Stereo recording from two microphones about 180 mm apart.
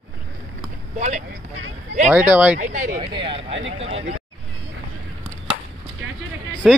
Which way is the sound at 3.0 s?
30° right (ahead or behind).